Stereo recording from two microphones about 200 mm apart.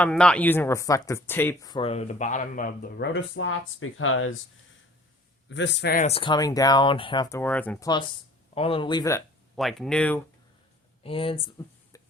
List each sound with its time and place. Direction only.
0.0 s speech: 5° left (ahead or behind)
1.7 s speech: 30° left (ahead or behind); by 4.4 s 90° left
5.5 s speech: 65° left (ahead or behind)
6.1 s speech: 25° left (ahead or behind); by 7.9 s 10° left (ahead or behind)
8.5 s speech: 25° left (ahead or behind)
9.6 s speech: centre (ahead or behind)
11.0 s speech: 25° left (ahead or behind)